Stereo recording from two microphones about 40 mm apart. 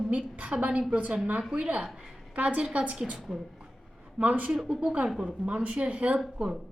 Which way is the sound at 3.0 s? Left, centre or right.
Centre.